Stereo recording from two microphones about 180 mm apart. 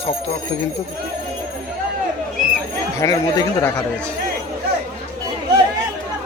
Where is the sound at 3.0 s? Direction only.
15° left (ahead or behind).